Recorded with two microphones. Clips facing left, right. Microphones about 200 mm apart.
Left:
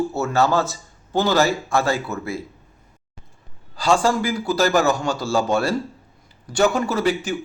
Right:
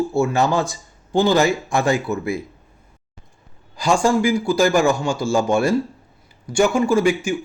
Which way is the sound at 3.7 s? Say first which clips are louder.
Right 1 dB; 15° right (ahead or behind).